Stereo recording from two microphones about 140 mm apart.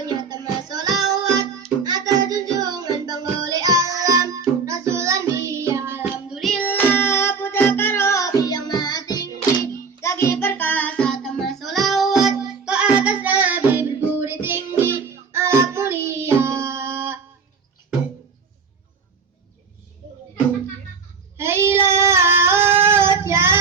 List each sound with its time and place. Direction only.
0.0 s music: 25° right (ahead or behind)
1.9 s child singing: 30° right (ahead or behind)
6.2 s music: centre (ahead or behind); by 17.2 s 15° right (ahead or behind)
21.3 s child singing: 15° right (ahead or behind)